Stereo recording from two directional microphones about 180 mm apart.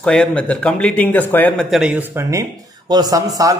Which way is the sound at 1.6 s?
5° right (ahead or behind).